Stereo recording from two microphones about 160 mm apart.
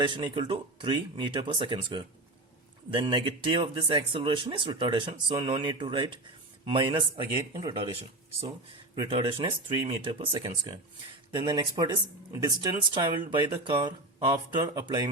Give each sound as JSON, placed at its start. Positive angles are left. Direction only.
{"t": 0.1, "sound": "speech", "side_deg": -30}
{"t": 9.0, "sound": "speech", "side_deg": -35}